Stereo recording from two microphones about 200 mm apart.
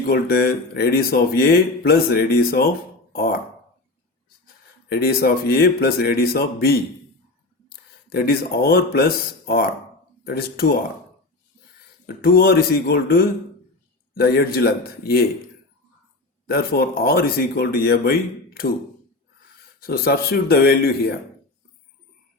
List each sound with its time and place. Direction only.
0.1 s speech: 50° left (ahead or behind)
4.9 s speech: 50° left (ahead or behind)
12.0 s speech: 50° left (ahead or behind)
16.5 s speech: 50° left (ahead or behind)
19.8 s speech: 50° left (ahead or behind)